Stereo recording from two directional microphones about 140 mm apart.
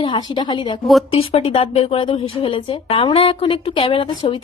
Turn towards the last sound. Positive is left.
turn(degrees=40)  # may be behind; listen again after turning